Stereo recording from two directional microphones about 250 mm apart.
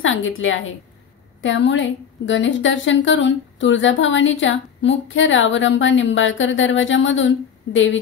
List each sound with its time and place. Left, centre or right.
0.0 s a woman's voice: left